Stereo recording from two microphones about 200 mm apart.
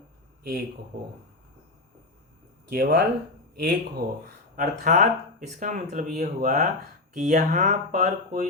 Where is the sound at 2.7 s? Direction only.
55° right (ahead or behind).